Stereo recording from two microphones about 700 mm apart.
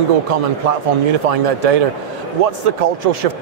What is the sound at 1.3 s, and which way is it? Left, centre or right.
Speech, right.